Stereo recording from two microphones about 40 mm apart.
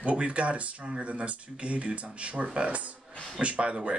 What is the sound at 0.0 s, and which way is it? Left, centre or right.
Speech, right.